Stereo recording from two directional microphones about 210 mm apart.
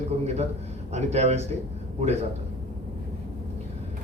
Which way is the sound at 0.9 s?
30° right (ahead or behind).